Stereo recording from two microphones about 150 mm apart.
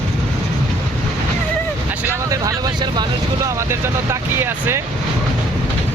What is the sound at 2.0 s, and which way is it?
Vehicle, 20° right (ahead or behind).